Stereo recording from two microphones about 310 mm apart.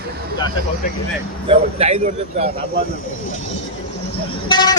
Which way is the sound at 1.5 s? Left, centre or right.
Centre.